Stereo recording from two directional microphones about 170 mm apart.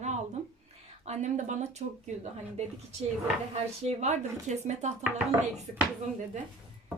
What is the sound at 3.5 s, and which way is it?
Speech, 40° right (ahead or behind).